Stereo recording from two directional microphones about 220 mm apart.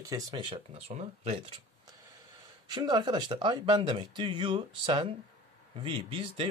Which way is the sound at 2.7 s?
20° right (ahead or behind).